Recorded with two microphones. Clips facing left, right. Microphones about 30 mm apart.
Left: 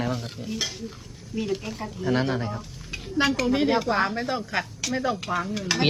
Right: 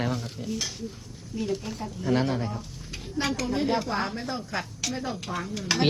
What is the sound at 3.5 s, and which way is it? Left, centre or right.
Speech, left.